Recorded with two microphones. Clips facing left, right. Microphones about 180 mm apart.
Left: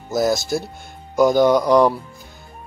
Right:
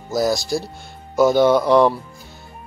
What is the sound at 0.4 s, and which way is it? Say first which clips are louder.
Speech: even; 20° left (ahead or behind).